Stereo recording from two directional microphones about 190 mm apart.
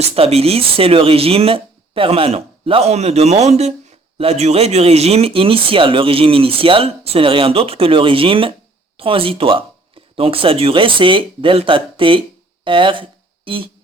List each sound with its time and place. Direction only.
0.0 s speech: 30° right (ahead or behind)